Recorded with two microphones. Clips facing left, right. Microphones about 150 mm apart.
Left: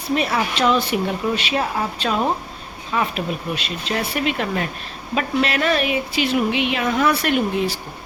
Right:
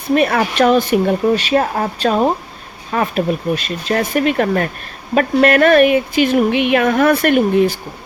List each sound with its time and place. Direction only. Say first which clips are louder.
0.1 s speech: right 6 dB; 55° right (ahead or behind)